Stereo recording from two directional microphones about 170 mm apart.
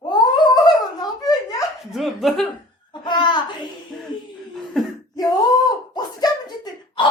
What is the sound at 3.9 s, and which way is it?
Speech, 5° left (ahead or behind).